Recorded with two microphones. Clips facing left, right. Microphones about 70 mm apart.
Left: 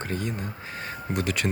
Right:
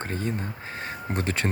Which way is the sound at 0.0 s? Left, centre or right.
Right.